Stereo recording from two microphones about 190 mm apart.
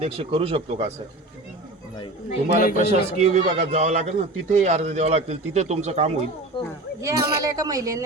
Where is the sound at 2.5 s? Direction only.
45° left (ahead or behind).